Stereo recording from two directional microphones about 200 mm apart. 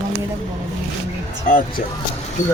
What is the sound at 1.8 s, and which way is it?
Speech, 40° left (ahead or behind).